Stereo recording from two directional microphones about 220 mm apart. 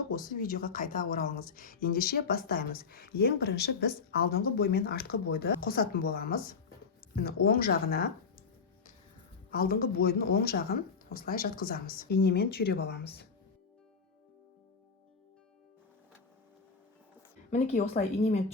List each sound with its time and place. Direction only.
0.1 s speech: 40° left (ahead or behind)
9.5 s speech: 40° left (ahead or behind)
17.5 s speech: 35° left (ahead or behind)